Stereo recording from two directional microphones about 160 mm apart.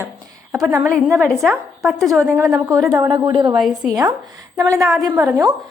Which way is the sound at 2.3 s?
20° right (ahead or behind).